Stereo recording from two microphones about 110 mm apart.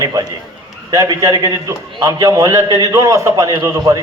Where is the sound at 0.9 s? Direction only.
25° right (ahead or behind).